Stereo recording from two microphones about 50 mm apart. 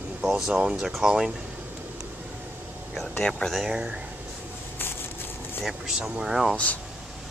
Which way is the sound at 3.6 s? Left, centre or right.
Centre.